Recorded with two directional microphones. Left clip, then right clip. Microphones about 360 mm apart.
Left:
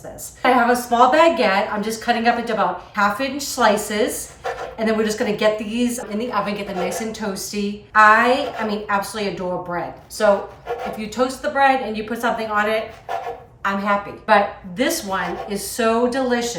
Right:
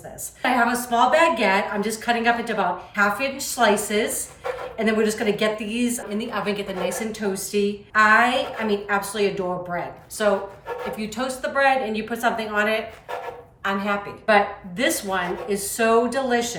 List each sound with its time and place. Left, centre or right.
0.4 s a woman's voice: centre
10.9 s a woman's voice: centre